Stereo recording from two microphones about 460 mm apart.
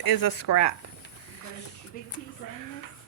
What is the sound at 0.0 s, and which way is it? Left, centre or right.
Speech, left.